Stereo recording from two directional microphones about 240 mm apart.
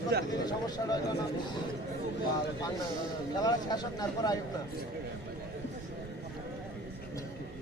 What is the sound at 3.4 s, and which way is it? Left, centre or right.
Speech, centre.